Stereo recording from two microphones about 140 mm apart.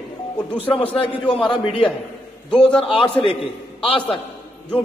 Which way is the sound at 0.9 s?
40° left (ahead or behind).